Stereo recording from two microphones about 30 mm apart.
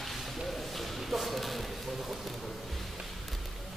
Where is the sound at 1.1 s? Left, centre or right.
Centre.